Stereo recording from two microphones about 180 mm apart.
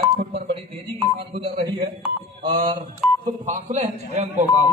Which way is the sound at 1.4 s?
30° right (ahead or behind).